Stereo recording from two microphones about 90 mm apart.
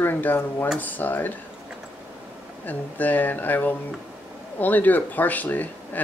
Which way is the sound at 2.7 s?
20° left (ahead or behind).